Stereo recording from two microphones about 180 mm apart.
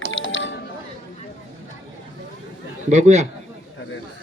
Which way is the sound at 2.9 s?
40° right (ahead or behind).